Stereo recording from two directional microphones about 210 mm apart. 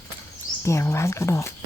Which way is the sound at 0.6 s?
15° left (ahead or behind).